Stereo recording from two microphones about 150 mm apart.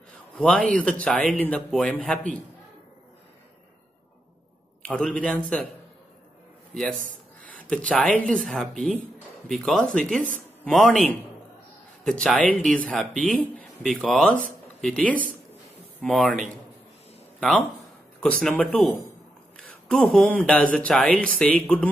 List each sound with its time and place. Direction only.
0.4 s speech: 5° left (ahead or behind)
4.8 s speech: 10° left (ahead or behind)
6.7 s speech: centre (ahead or behind)
7.0 s a sound: 65° right (ahead or behind)
7.9 s speech: 5° left (ahead or behind)